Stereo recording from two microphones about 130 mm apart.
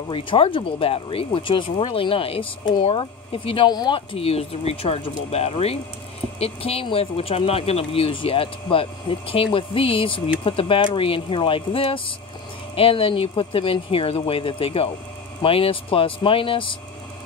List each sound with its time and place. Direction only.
0.1 s speech: 40° left (ahead or behind)